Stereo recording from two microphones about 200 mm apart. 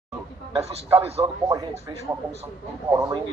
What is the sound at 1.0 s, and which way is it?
Speech, 30° right (ahead or behind).